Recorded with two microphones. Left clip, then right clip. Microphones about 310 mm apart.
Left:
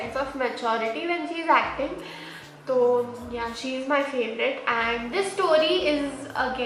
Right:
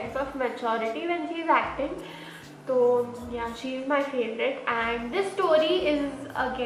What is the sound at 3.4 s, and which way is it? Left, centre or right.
A woman's voice, centre.